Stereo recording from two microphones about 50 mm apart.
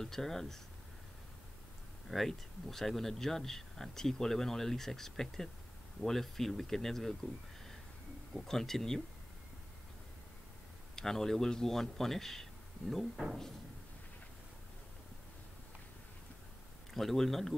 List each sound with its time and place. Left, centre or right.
0.0 s speech: centre
2.0 s speech: centre
8.5 s speech: centre
11.0 s speech: centre
12.9 s speech: centre
16.9 s speech: centre